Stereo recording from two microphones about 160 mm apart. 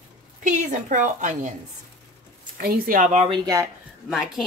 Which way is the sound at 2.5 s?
65° right (ahead or behind).